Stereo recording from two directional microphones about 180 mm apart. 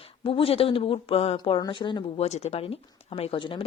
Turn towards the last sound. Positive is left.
turn(degrees=30)  # may be behind; listen again after turning